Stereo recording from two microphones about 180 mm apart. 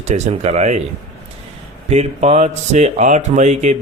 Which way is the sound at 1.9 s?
35° right (ahead or behind).